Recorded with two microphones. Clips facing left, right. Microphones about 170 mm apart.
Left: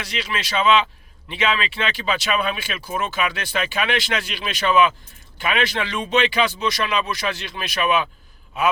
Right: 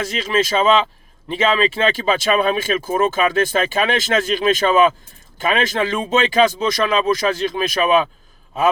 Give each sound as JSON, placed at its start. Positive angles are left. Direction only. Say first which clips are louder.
{"t": 0.0, "sound": "speech", "louder": "right 9 dB", "side_deg": -45}